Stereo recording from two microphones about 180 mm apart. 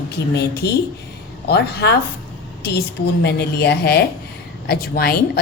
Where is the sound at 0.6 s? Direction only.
65° left (ahead or behind).